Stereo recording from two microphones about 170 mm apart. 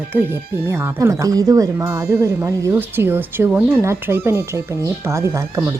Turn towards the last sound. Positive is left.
turn(degrees=-15)  # may be behind; listen again after turning